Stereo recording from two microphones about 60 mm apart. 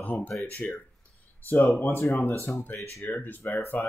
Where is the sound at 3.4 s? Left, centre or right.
Left.